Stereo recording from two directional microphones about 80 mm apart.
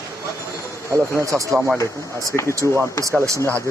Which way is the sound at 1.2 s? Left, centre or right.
Right.